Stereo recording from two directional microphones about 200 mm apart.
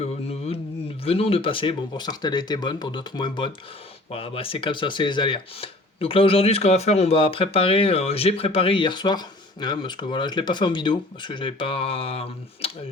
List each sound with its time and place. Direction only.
0.0 s mantra: 30° left (ahead or behind)
1.0 s speech: 30° left (ahead or behind)